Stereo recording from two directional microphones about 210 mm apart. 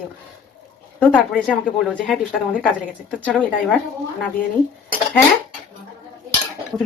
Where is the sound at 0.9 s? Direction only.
5° left (ahead or behind).